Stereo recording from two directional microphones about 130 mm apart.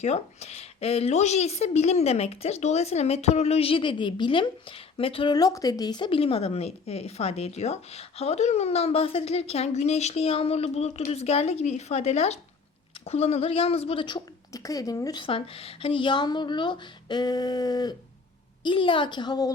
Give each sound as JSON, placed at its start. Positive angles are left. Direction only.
{"t": 0.0, "sound": "a woman's voice", "side_deg": 55}
{"t": 5.3, "sound": "a woman's voice", "side_deg": 30}
{"t": 14.5, "sound": "speech", "side_deg": 25}
{"t": 15.2, "sound": "speech", "side_deg": 45}